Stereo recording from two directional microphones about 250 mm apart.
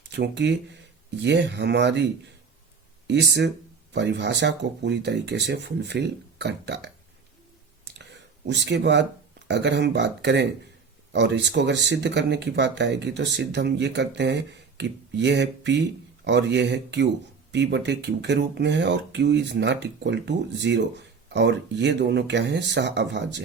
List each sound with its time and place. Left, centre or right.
0.2 s speech: right
3.1 s speech: right
8.4 s speech: right